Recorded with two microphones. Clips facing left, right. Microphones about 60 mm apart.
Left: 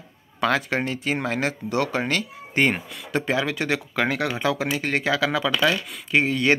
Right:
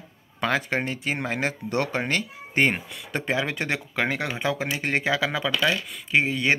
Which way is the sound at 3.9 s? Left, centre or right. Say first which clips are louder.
Left 3 dB; centre.